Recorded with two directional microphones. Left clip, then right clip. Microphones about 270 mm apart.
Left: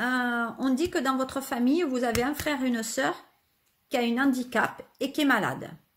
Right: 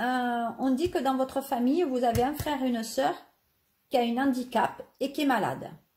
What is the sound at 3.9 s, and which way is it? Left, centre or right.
Speech, left.